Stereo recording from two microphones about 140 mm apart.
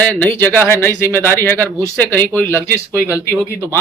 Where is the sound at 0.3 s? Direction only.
15° left (ahead or behind).